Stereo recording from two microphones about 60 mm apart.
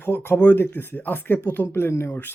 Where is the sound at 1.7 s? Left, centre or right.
Left.